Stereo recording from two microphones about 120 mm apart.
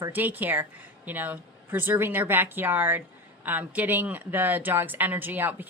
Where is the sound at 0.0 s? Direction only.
15° right (ahead or behind).